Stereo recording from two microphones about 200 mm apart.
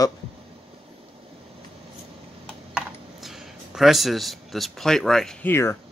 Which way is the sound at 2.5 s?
5° right (ahead or behind).